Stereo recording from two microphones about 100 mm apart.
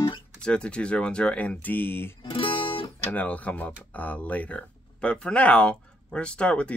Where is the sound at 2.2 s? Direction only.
60° left (ahead or behind).